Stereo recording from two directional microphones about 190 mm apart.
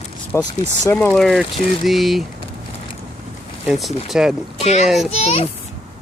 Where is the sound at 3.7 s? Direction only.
Centre (ahead or behind).